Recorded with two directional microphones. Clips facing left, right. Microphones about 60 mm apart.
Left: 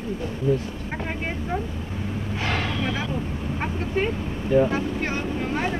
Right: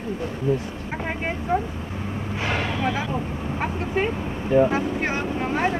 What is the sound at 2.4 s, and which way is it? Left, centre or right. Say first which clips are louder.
Speech: right 2 dB; centre.